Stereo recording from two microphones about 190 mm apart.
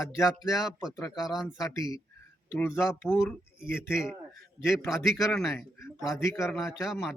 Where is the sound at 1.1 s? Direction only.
Centre (ahead or behind).